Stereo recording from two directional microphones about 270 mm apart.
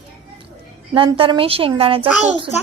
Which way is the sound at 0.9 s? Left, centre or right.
Centre.